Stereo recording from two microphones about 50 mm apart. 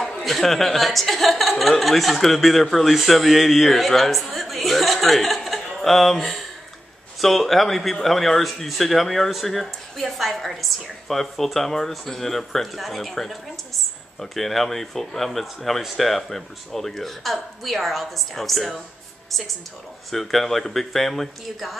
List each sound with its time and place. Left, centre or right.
0.0 s speech: centre
20.1 s speech: centre